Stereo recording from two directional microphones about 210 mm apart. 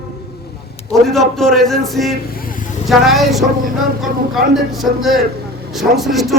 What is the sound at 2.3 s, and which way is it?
Vehicle, 40° left (ahead or behind).